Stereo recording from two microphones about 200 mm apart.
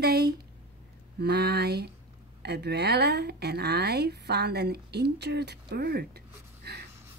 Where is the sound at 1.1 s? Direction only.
55° right (ahead or behind).